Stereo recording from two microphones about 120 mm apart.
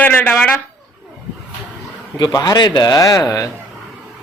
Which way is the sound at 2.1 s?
35° left (ahead or behind).